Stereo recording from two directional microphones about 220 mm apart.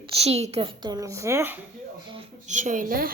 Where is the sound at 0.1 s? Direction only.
30° right (ahead or behind); by 1.5 s 10° right (ahead or behind).